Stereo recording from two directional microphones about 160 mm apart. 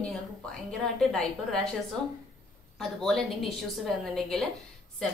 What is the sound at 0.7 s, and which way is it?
A woman's voice, 5° left (ahead or behind).